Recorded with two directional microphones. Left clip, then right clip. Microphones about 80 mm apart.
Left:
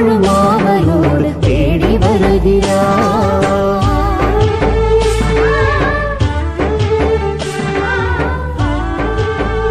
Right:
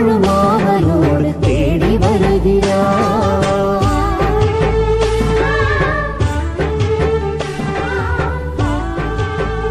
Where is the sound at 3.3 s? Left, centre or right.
Centre.